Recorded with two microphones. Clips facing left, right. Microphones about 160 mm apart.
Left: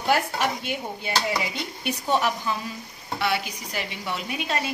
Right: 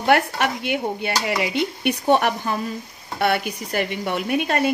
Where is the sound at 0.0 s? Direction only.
65° right (ahead or behind).